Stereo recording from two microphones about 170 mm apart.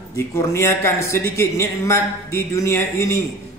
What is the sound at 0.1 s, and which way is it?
A man's voice, 15° left (ahead or behind).